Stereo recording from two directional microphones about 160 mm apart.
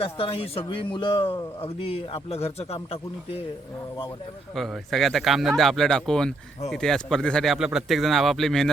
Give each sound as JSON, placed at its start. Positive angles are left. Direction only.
{"t": 0.0, "sound": "speech", "side_deg": 35}
{"t": 4.5, "sound": "speech", "side_deg": 0}